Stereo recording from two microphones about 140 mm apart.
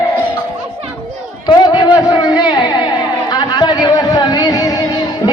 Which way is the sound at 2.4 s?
30° left (ahead or behind).